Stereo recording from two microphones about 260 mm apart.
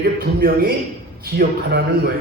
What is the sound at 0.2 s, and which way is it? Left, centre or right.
A man's voice, right.